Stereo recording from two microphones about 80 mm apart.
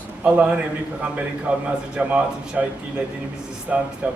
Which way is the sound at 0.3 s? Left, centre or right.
Centre.